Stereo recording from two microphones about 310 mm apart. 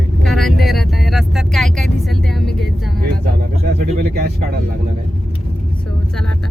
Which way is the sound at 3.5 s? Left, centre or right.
Right.